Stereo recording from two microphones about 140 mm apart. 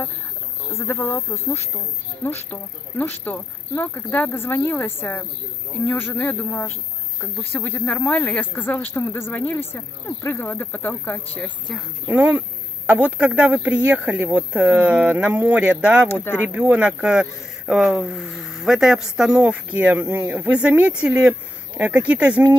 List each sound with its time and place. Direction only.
0.7 s speech: 15° left (ahead or behind)
12.1 s speech: 10° right (ahead or behind)
16.1 s speech: 15° left (ahead or behind)
16.4 s speech: 10° right (ahead or behind)